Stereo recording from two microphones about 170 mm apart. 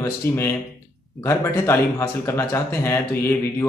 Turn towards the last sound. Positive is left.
turn(degrees=15)  # may be behind; listen again after turning